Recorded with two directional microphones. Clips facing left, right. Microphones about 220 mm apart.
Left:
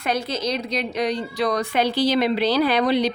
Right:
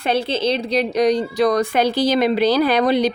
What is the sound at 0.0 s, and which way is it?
A woman's voice, 30° right (ahead or behind).